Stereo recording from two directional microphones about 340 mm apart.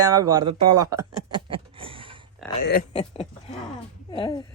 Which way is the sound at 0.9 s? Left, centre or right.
Centre.